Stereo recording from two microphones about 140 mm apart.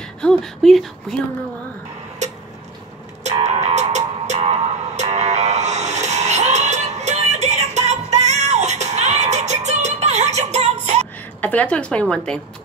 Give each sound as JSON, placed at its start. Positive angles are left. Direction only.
{"t": 0.0, "sound": "speech", "side_deg": 5}
{"t": 3.3, "sound": "music", "side_deg": -50}
{"t": 11.4, "sound": "a woman's voice", "side_deg": 10}